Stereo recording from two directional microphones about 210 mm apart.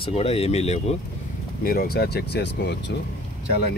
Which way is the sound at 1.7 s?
45° left (ahead or behind).